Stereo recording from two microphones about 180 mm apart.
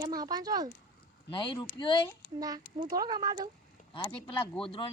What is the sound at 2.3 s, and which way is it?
Speech, 20° right (ahead or behind).